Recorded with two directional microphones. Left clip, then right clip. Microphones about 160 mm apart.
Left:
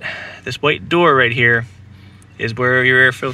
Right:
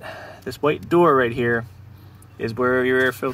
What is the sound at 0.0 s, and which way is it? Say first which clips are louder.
Speech: left 7 dB; 30° left (ahead or behind).